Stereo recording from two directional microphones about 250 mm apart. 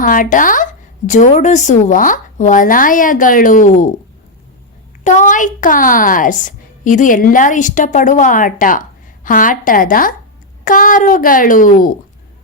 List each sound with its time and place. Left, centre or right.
0.0 s a woman's voice: left
5.0 s a woman's voice: left